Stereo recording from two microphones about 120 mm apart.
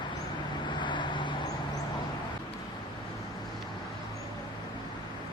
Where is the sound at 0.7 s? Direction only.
40° left (ahead or behind).